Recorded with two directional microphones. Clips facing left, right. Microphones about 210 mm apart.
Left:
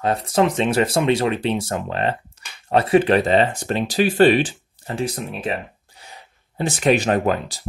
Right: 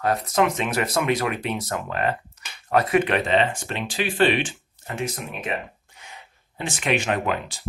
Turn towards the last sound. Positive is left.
turn(degrees=40)  # may be behind; listen again after turning